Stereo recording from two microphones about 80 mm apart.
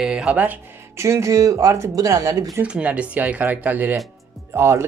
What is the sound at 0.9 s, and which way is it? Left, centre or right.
Speech, right.